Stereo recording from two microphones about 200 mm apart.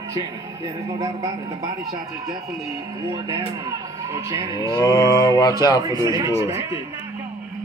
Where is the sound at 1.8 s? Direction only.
50° right (ahead or behind).